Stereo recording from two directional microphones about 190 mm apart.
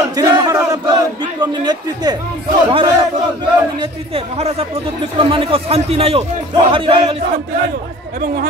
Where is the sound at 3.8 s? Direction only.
30° right (ahead or behind).